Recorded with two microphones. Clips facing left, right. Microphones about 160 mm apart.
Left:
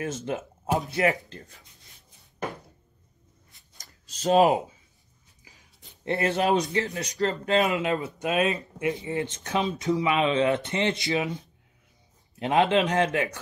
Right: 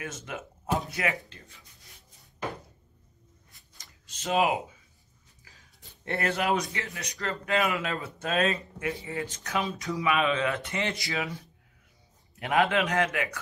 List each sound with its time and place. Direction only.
0.1 s speech: 25° left (ahead or behind)
1.0 s speech: 40° left (ahead or behind)
3.7 s a sound: 40° left (ahead or behind)
5.4 s speech: 20° left (ahead or behind)